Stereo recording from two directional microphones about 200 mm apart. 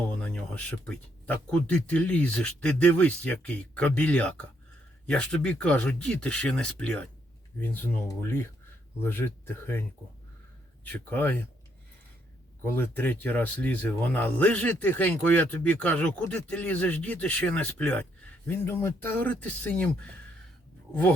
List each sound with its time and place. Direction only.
0.2 s speech: 5° left (ahead or behind)
10.8 s speech: 10° left (ahead or behind)
12.7 s speech: 10° left (ahead or behind)